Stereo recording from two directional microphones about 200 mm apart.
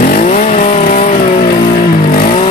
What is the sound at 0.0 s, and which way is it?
Vehicle, 45° left (ahead or behind).